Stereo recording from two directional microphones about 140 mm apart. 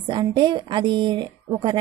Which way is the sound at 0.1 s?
35° right (ahead or behind).